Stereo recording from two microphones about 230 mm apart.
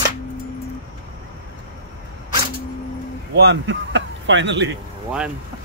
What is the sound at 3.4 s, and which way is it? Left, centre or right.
Speech, right.